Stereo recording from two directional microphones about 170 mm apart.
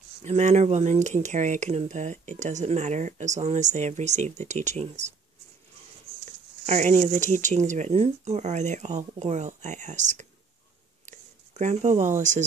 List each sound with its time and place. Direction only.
0.2 s speech: 45° right (ahead or behind)
6.6 s speech: 40° right (ahead or behind)
11.1 s a sound: 45° right (ahead or behind)
12.2 s speech: 45° right (ahead or behind)